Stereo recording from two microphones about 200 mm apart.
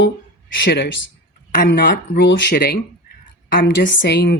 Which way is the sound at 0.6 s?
60° left (ahead or behind).